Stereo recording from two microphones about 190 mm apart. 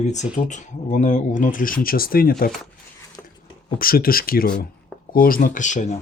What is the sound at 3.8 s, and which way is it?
Speech, 50° left (ahead or behind).